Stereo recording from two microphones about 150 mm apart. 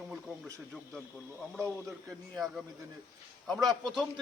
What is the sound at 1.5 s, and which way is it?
A man's voice, centre (ahead or behind).